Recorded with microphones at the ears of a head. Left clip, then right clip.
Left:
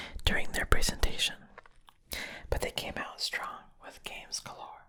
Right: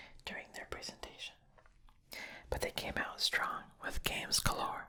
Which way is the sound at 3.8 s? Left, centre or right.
Right.